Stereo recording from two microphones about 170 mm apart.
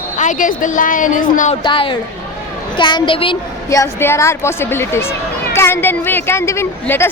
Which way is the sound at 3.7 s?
15° left (ahead or behind).